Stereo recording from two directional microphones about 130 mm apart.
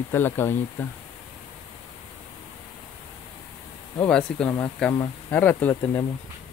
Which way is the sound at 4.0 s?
5° left (ahead or behind).